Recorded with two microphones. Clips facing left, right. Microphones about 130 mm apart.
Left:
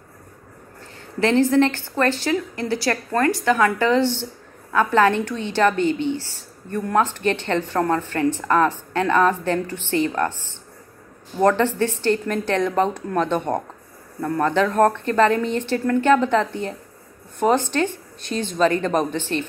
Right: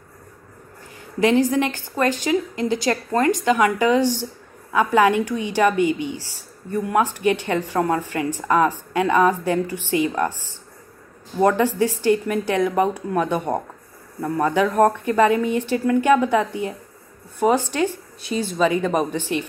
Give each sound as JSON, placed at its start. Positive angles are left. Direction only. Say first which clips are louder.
{"t": 1.2, "sound": "a woman's voice", "louder": "left 1 dB", "side_deg": -15}
{"t": 11.3, "sound": "a woman's voice", "louder": "even", "side_deg": -10}